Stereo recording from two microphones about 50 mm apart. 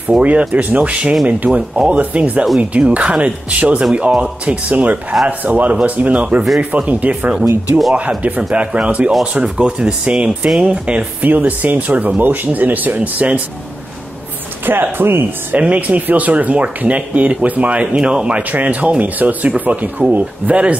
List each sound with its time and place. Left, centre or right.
0.2 s speech: right
8.4 s speech: right
11.1 s speech: right
14.7 s speech: right
15.5 s speech: right
18.5 s speech: right